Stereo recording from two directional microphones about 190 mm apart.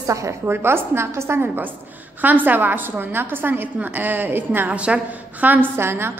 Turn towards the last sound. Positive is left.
turn(degrees=-10)  # may be behind; listen again after turning